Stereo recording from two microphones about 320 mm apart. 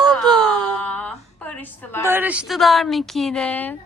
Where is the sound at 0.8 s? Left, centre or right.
Centre.